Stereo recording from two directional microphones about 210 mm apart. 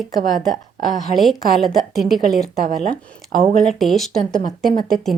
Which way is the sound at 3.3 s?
40° right (ahead or behind).